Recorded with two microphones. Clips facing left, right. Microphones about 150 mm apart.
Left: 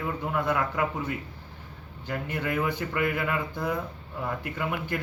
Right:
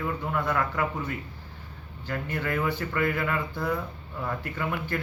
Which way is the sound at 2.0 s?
15° left (ahead or behind).